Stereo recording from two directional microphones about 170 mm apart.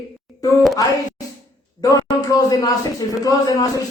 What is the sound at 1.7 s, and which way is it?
A man's voice, 20° left (ahead or behind).